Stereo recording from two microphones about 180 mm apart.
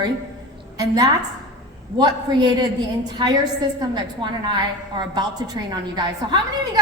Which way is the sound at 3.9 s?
25° right (ahead or behind).